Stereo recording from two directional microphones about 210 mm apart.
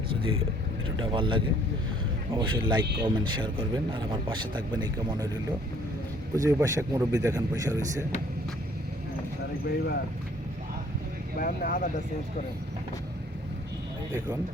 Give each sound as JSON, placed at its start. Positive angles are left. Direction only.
{"t": 1.0, "sound": "speech", "side_deg": -25}
{"t": 6.3, "sound": "speech", "side_deg": -15}
{"t": 9.6, "sound": "speech", "side_deg": 50}
{"t": 11.3, "sound": "speech", "side_deg": 40}